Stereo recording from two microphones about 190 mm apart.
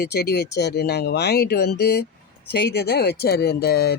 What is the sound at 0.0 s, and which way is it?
Speech, 60° left (ahead or behind).